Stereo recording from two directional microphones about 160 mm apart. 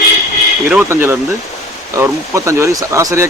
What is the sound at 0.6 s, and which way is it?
Speech, 10° right (ahead or behind).